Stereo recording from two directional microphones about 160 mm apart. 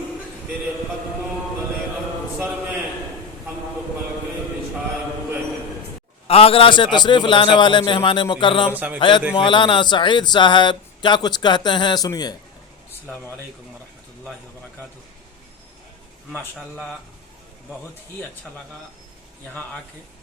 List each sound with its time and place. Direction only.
6.2 s a man's voice: 35° left (ahead or behind)
8.7 s a man's voice: 10° right (ahead or behind)
9.0 s a man's voice: 30° left (ahead or behind)
16.6 s speech: 5° left (ahead or behind)